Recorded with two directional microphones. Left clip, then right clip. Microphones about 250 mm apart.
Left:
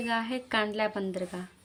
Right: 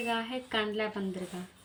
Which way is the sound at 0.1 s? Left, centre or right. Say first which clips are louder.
Left 5 dB; left.